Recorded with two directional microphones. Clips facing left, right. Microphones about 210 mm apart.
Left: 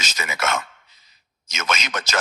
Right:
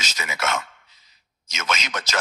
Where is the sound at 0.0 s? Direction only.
50° left (ahead or behind).